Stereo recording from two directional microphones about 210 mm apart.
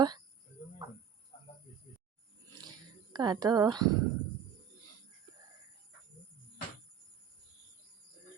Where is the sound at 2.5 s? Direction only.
20° right (ahead or behind).